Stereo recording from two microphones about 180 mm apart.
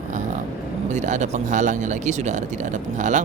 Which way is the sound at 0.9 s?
40° right (ahead or behind).